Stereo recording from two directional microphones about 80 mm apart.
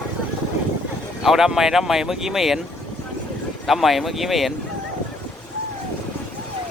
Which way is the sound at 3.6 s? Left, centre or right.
Centre.